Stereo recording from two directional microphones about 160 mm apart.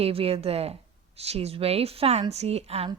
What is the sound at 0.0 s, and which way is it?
A woman's voice, 35° right (ahead or behind).